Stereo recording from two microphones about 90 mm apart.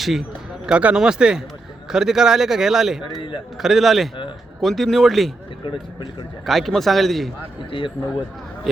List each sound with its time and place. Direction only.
0.0 s speech: 5° right (ahead or behind)
3.2 s speech: 65° left (ahead or behind)
3.6 s speech: 5° right (ahead or behind)
5.6 s speech: 60° left (ahead or behind)
6.4 s speech: centre (ahead or behind)
7.7 s a man's voice: 70° left (ahead or behind)
8.7 s speech: 5° right (ahead or behind)